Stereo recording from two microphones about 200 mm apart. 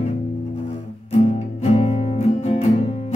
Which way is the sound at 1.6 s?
30° left (ahead or behind).